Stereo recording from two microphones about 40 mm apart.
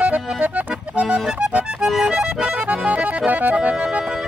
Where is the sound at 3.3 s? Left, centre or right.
Right.